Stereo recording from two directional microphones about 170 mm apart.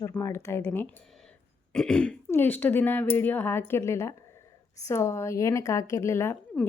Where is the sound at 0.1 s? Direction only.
15° left (ahead or behind).